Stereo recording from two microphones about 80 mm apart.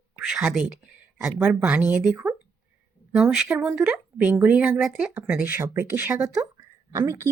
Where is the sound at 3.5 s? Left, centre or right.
Right.